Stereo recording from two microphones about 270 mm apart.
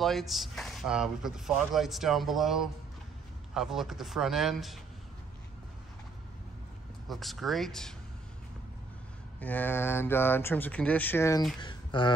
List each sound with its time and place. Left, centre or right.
0.0 s speech: centre
7.1 s speech: centre
9.4 s speech: centre
11.6 s a sound: centre